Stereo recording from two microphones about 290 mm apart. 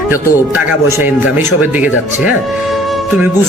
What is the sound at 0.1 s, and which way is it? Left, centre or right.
Speech, centre.